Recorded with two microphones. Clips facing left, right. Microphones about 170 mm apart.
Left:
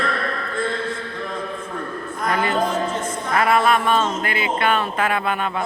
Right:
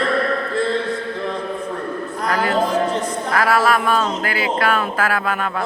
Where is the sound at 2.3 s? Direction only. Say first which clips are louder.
Right 3 dB; 35° right (ahead or behind).